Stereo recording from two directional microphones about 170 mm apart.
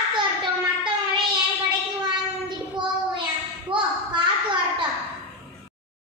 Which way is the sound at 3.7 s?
30° right (ahead or behind).